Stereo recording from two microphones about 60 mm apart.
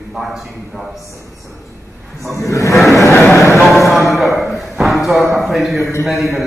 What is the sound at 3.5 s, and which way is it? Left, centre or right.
A man's voice, centre.